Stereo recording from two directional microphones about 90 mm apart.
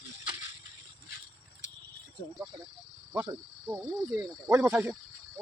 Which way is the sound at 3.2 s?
45° right (ahead or behind).